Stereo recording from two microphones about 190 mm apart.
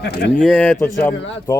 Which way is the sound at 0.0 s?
55° left (ahead or behind).